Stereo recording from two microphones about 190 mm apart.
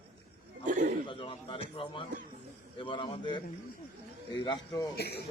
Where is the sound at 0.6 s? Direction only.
45° right (ahead or behind).